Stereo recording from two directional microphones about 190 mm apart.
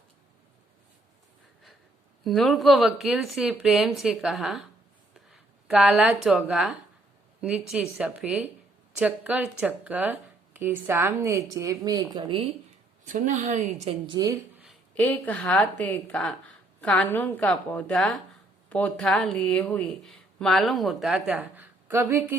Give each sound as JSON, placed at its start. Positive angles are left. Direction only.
{"t": 2.2, "sound": "speech", "side_deg": 0}
{"t": 13.1, "sound": "a woman's voice", "side_deg": -40}
{"t": 14.6, "sound": "a woman's voice", "side_deg": 5}